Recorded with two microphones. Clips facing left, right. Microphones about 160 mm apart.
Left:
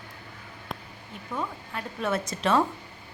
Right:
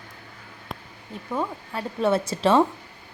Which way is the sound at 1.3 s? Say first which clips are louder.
Right 5 dB; 30° right (ahead or behind).